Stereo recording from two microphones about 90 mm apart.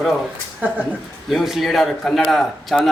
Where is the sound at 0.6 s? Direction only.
20° right (ahead or behind).